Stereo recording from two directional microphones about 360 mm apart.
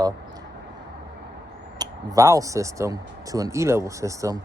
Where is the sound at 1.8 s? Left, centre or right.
Centre.